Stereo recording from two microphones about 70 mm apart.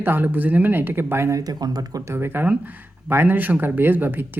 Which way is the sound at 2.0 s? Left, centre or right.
Right.